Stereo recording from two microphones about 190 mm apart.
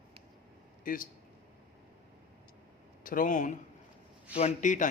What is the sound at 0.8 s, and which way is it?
Speech, 45° left (ahead or behind).